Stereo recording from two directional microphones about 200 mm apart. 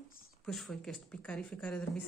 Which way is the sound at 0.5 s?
Centre (ahead or behind).